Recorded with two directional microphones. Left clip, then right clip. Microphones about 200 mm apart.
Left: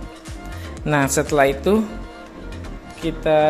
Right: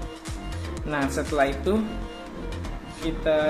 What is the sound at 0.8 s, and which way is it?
Speech, 55° left (ahead or behind).